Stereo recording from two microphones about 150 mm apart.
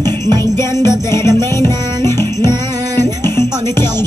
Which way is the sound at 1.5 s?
15° left (ahead or behind).